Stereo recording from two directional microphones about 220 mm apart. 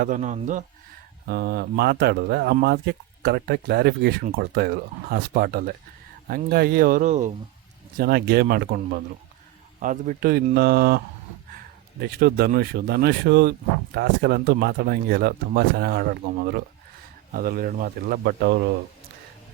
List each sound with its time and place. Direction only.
0.0 s speech: 35° right (ahead or behind)
1.3 s speech: 45° right (ahead or behind)
7.9 s speech: 45° right (ahead or behind)